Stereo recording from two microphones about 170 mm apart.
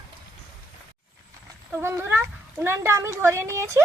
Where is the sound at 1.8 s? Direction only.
15° right (ahead or behind).